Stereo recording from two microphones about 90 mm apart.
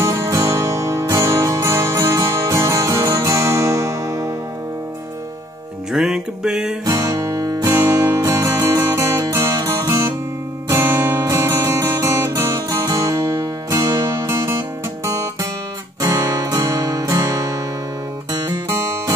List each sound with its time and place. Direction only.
0.0 s music: 35° right (ahead or behind)
5.9 s music: 5° right (ahead or behind)
6.9 s music: 40° right (ahead or behind)
16.0 s guitar: 35° right (ahead or behind)
18.7 s music: 30° right (ahead or behind)